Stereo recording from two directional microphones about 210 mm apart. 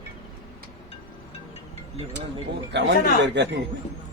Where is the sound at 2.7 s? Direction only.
55° right (ahead or behind).